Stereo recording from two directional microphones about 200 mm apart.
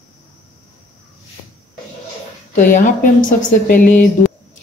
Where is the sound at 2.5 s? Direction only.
40° left (ahead or behind).